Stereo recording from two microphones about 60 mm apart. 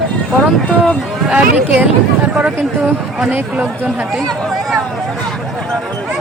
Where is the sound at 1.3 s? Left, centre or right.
Centre.